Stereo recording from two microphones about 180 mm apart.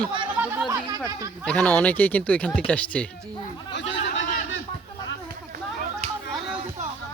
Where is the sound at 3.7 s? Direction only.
80° left.